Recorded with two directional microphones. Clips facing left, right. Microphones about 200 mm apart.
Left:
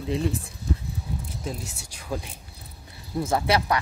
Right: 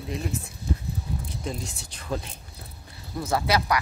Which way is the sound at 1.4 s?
5° left (ahead or behind).